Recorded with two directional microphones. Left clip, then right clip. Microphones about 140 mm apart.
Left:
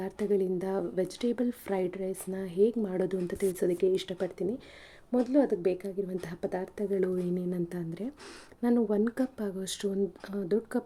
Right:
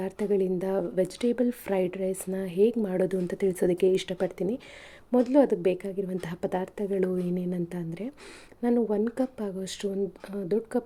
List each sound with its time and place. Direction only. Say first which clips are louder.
0.0 s speech: right 2 dB; 10° right (ahead or behind)
3.5 s speech: right 4 dB; 20° right (ahead or behind); by 10.8 s centre (ahead or behind)